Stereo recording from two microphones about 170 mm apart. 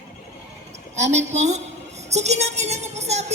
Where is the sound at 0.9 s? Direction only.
40° right (ahead or behind).